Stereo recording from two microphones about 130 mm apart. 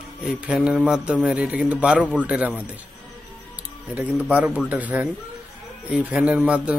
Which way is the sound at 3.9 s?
10° right (ahead or behind).